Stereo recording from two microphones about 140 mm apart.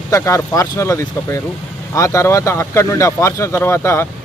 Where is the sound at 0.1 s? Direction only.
20° left (ahead or behind).